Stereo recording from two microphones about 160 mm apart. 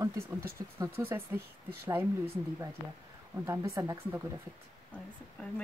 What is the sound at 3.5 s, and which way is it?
Speech, 20° right (ahead or behind).